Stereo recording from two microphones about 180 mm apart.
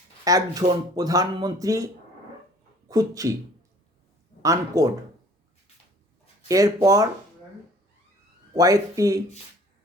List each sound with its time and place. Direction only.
0.3 s speech: 20° right (ahead or behind)
2.9 s speech: 20° right (ahead or behind)
4.4 s speech: 20° right (ahead or behind)
6.5 s speech: 20° right (ahead or behind)
8.5 s speech: 20° right (ahead or behind)